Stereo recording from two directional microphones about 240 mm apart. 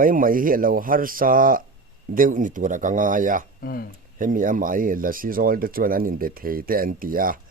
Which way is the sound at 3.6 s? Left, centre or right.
Left.